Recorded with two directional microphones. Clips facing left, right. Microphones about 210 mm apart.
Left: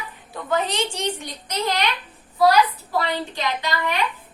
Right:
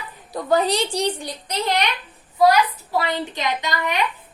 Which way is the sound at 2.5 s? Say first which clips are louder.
Even; 20° right (ahead or behind).